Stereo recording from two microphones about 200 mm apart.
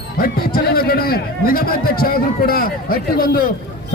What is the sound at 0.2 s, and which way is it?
A man's voice, 50° left (ahead or behind).